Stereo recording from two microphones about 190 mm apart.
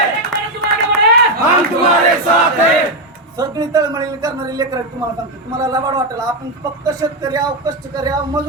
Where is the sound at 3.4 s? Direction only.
20° right (ahead or behind).